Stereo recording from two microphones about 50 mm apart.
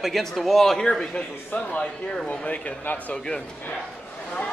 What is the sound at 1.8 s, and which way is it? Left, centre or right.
Speech, centre.